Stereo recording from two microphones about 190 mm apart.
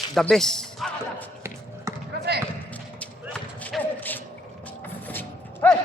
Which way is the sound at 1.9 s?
15° right (ahead or behind).